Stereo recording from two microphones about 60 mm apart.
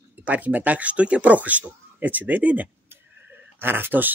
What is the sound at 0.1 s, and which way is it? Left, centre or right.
Speech, right.